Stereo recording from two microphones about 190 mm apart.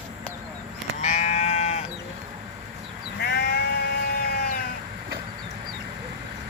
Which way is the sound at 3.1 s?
60° left (ahead or behind).